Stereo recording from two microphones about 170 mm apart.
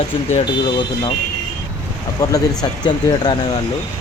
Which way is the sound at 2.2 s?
20° left (ahead or behind).